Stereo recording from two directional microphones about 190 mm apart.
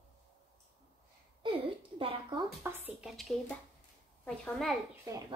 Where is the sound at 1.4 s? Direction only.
30° right (ahead or behind).